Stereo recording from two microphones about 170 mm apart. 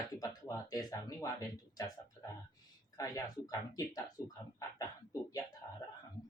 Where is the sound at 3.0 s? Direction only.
20° left (ahead or behind).